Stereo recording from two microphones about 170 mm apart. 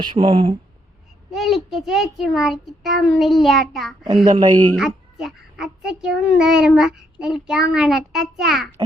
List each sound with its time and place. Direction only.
0.0 s a child's voice: 30° right (ahead or behind)
1.3 s a child's voice: centre (ahead or behind)
4.0 s a child's voice: 25° right (ahead or behind)
4.8 s a child's voice: 5° right (ahead or behind)